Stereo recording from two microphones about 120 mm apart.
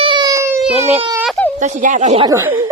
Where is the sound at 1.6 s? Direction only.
85° right.